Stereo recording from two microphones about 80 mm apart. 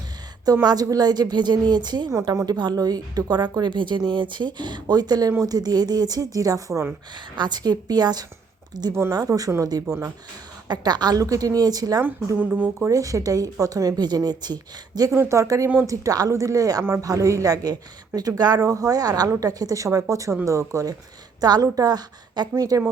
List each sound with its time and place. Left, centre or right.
0.4 s a woman's voice: right
2.1 s a woman's voice: right
7.3 s a woman's voice: right
8.9 s speech: right
9.1 s speech: right
10.7 s speech: right
12.4 s speech: right
12.9 s a woman's voice: right
15.1 s speech: right
21.4 s speech: right